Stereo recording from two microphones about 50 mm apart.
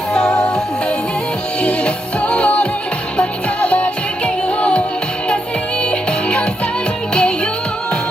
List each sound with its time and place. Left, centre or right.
0.1 s music: centre
5.8 s music: left